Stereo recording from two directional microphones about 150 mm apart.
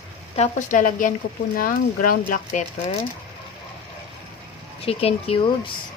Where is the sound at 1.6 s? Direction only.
70° left (ahead or behind).